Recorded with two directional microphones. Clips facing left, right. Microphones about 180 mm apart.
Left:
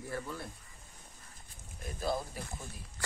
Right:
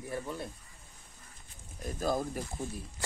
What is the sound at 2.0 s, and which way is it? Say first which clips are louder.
Speech: right 3 dB; 45° right (ahead or behind).